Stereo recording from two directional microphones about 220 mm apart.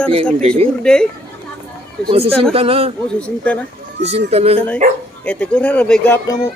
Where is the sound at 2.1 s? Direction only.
25° right (ahead or behind).